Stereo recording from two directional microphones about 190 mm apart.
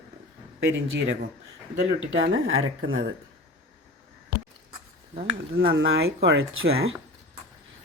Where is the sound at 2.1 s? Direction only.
90° right.